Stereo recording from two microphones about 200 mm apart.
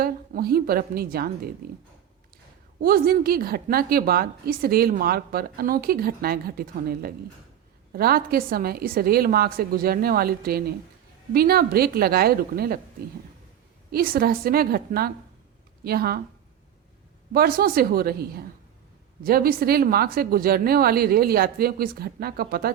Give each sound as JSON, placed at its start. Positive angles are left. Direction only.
{"t": 0.0, "sound": "a woman's voice", "side_deg": -50}
{"t": 2.8, "sound": "a woman's voice", "side_deg": -50}
{"t": 13.9, "sound": "a woman's voice", "side_deg": -50}
{"t": 17.3, "sound": "a woman's voice", "side_deg": -50}